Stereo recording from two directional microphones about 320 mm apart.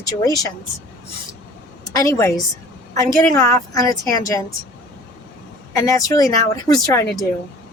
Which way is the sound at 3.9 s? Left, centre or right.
Centre.